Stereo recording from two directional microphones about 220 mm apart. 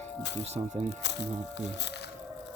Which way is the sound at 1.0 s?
50° left (ahead or behind).